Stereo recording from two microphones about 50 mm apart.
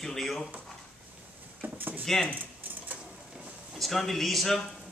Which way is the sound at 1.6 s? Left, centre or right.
Right.